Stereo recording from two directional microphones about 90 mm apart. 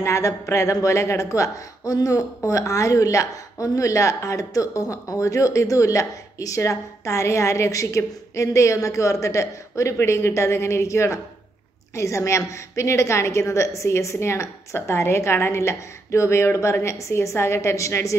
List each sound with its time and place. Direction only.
0.0 s a woman's voice: 35° left (ahead or behind)